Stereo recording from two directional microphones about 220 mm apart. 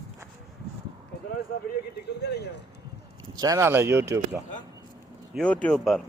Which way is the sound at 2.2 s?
50° left (ahead or behind).